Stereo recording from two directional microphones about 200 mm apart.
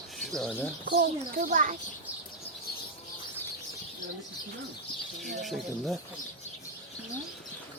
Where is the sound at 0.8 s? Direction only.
50° right (ahead or behind).